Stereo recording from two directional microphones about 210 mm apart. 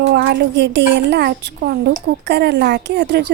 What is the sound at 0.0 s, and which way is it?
A woman's voice, 55° right (ahead or behind).